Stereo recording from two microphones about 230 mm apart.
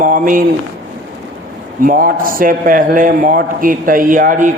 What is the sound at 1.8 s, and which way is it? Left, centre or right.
A man's voice, right.